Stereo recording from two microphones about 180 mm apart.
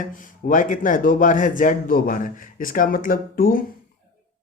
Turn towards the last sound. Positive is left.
turn(degrees=50)  # may be behind; listen again after turning